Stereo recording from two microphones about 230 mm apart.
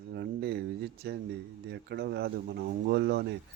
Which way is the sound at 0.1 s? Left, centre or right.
Right.